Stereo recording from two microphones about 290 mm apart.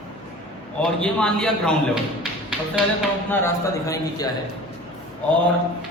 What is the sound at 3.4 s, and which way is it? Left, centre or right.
Speech, centre.